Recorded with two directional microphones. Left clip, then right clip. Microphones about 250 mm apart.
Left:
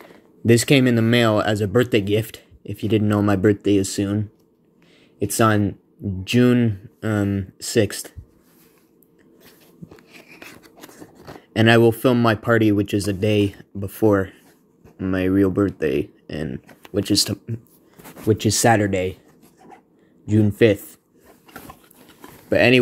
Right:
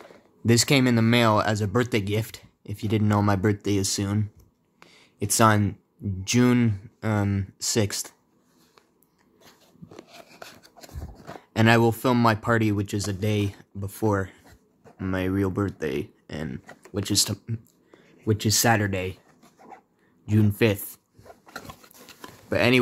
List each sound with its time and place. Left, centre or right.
0.0 s speech: centre
9.9 s a sound: centre
11.3 s speech: centre
20.2 s speech: centre
21.6 s a sound: right
22.5 s speech: centre